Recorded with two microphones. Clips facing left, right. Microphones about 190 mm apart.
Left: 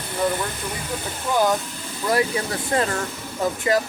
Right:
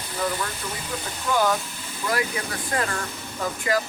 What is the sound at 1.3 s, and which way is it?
Speech, 20° left (ahead or behind).